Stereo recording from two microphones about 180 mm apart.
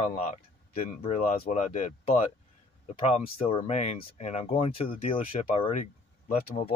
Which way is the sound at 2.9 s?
35° left (ahead or behind).